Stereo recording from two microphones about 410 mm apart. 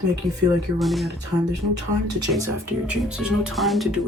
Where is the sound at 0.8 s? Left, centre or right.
Centre.